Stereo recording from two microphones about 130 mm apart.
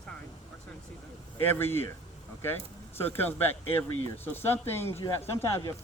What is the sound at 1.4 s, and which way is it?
Speech, 15° left (ahead or behind).